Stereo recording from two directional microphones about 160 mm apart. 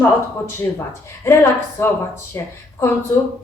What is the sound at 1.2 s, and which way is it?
A woman's voice, 15° left (ahead or behind).